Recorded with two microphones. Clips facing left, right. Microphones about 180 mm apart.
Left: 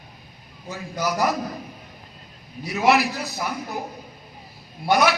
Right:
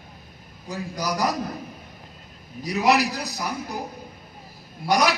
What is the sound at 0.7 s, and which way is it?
Speech, 35° right (ahead or behind).